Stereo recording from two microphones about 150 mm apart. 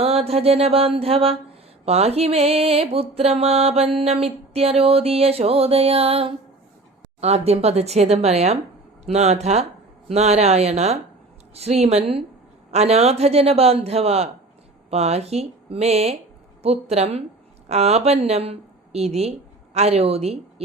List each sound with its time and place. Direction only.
0.0 s mantra: 40° right (ahead or behind)
7.2 s a man's voice: 45° right (ahead or behind)